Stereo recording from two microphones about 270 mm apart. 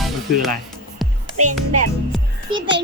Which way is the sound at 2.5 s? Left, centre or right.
Right.